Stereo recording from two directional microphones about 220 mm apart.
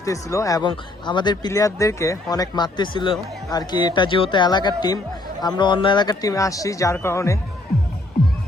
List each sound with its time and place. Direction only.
0.0 s speech: 15° left (ahead or behind)